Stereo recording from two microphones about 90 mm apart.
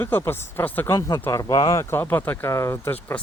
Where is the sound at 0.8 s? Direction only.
35° left (ahead or behind).